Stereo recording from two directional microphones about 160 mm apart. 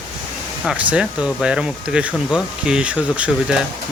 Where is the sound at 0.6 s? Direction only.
5° right (ahead or behind).